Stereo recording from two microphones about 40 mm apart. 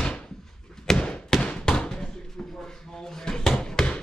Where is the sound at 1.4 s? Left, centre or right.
Centre.